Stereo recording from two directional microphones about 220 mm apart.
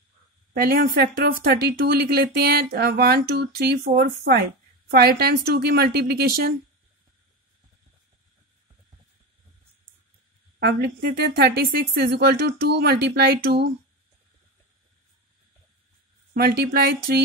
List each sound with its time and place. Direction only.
0.5 s a woman's voice: 45° right (ahead or behind)
10.6 s speech: 45° right (ahead or behind)
16.3 s speech: 45° right (ahead or behind)